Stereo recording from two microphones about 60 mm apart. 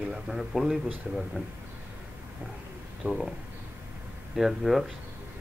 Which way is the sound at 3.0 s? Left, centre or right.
Centre.